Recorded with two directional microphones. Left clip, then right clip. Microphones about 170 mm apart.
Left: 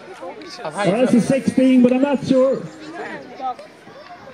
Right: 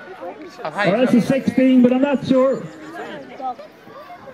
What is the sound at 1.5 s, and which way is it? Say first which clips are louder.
Speech: even; 50° left (ahead or behind).